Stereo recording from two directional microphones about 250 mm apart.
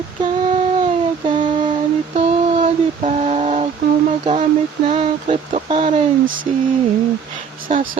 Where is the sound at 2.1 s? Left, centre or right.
Right.